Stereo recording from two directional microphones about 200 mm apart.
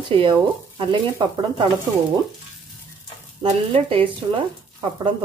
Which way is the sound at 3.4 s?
25° right (ahead or behind).